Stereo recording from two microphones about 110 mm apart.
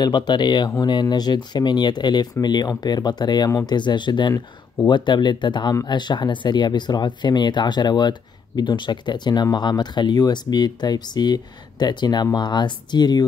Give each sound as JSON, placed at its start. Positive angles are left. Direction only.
{"t": 0.0, "sound": "speech", "side_deg": 40}